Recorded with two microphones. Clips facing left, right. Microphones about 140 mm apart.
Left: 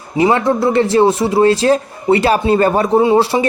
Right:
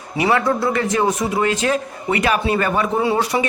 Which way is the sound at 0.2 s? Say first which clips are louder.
Left 5 dB; 25° left (ahead or behind).